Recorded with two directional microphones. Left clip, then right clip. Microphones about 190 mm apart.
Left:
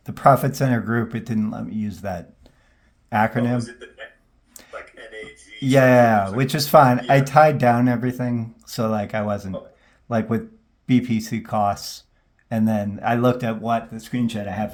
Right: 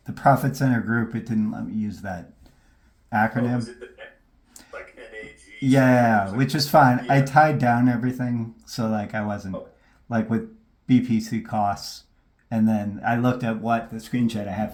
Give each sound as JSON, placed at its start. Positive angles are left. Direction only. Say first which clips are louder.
{"t": 0.0, "sound": "speech", "louder": "left 4 dB", "side_deg": 35}